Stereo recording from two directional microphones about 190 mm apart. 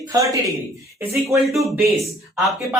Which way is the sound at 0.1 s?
15° right (ahead or behind).